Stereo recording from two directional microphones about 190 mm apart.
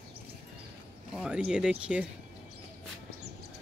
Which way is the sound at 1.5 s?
5° right (ahead or behind).